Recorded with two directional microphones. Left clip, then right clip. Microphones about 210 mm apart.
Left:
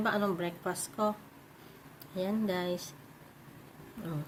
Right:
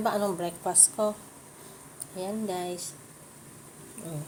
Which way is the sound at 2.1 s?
30° left (ahead or behind).